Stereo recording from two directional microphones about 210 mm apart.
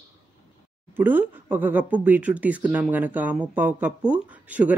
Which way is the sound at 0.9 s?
10° right (ahead or behind).